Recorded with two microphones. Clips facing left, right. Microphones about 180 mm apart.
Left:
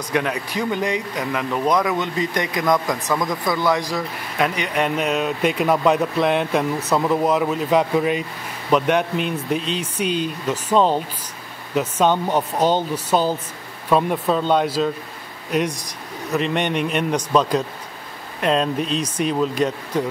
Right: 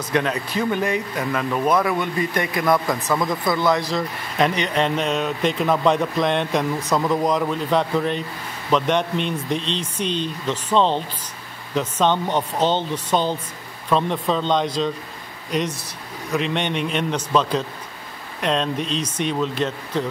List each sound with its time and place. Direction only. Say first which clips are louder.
0.1 s speech: right 1 dB; 15° left (ahead or behind)
3.2 s speech: right 1 dB; 5° right (ahead or behind)
3.5 s speech: even; 15° left (ahead or behind)